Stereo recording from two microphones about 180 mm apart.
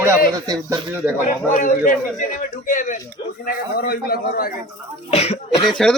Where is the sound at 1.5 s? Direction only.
45° left (ahead or behind).